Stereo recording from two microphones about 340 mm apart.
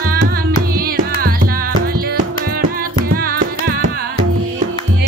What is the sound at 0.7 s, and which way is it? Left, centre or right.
Music, right.